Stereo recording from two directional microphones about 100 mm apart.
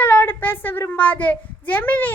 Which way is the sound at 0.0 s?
20° left (ahead or behind).